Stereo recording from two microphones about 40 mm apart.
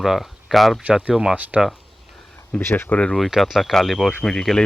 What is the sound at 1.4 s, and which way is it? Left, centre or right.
Speech, right.